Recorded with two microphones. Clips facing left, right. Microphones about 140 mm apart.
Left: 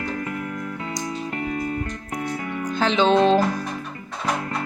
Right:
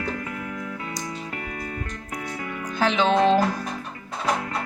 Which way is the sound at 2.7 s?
5° right (ahead or behind).